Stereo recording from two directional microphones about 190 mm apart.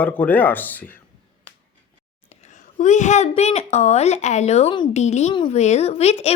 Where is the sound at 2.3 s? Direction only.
35° left (ahead or behind).